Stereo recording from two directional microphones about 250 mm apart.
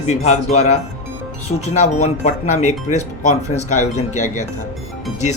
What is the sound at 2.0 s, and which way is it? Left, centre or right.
Speech, left.